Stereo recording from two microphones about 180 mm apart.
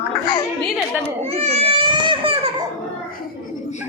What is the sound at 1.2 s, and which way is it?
Baby cry, 35° right (ahead or behind).